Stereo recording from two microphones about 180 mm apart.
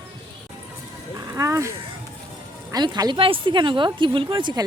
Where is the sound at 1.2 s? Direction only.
15° right (ahead or behind).